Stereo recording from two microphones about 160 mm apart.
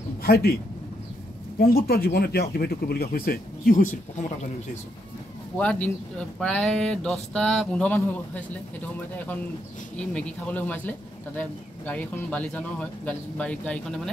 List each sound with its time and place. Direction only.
0.2 s speech: 75° left (ahead or behind)
1.6 s speech: 70° left (ahead or behind); by 4.5 s 50° left (ahead or behind)
5.6 s speech: 10° left (ahead or behind)
9.9 s speech: 5° left (ahead or behind)